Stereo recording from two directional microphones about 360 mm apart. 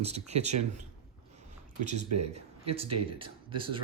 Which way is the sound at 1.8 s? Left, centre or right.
Right.